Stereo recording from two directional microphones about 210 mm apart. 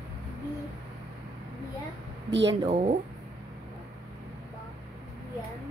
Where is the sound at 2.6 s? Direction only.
35° right (ahead or behind).